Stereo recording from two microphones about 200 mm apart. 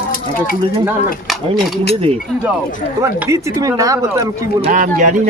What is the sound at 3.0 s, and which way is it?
Speech, 15° right (ahead or behind).